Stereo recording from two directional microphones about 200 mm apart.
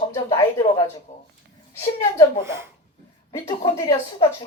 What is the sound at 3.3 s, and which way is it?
Speech, 15° left (ahead or behind).